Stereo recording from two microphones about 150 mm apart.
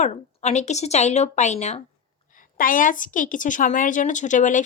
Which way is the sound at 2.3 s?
65° left (ahead or behind).